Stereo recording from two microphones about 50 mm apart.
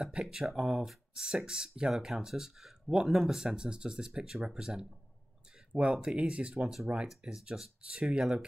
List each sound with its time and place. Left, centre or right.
0.0 s speech: centre